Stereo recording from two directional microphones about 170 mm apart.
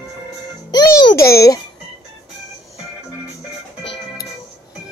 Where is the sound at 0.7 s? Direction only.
25° left (ahead or behind).